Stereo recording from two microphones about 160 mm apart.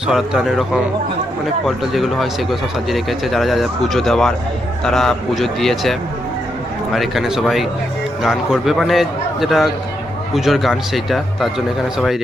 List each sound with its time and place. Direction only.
0.1 s speech: centre (ahead or behind)